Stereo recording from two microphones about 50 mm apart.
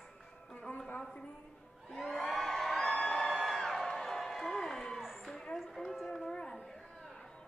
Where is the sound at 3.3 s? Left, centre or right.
Centre.